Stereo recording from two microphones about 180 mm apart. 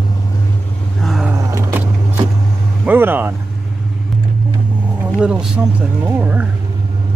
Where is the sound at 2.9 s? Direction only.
10° right (ahead or behind).